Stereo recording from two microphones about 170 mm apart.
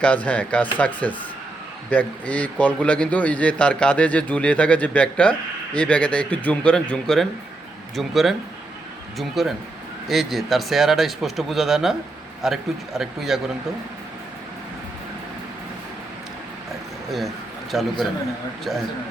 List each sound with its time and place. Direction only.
0.0 s a man's voice: 5° left (ahead or behind)
17.1 s a man's voice: centre (ahead or behind)